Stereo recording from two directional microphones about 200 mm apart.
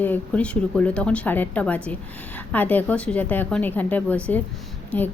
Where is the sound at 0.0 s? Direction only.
5° left (ahead or behind).